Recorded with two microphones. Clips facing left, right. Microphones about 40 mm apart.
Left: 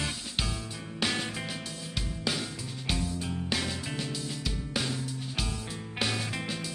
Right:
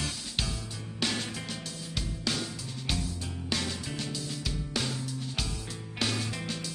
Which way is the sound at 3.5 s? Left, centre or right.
Centre.